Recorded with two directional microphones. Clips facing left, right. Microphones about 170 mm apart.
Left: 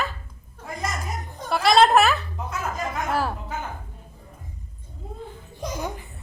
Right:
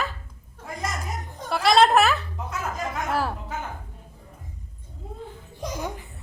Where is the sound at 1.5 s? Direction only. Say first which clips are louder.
Left 1 dB; 45° left (ahead or behind).